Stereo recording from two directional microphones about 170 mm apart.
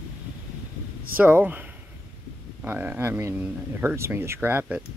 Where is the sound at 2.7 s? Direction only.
10° right (ahead or behind).